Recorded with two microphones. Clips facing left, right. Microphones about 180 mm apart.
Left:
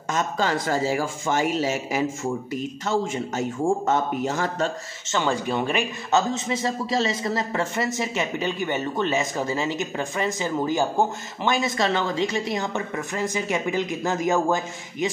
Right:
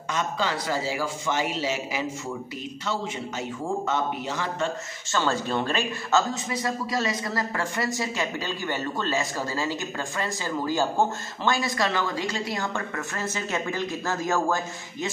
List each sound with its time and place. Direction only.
0.1 s a man's voice: 50° left (ahead or behind)
5.0 s speech: 15° left (ahead or behind)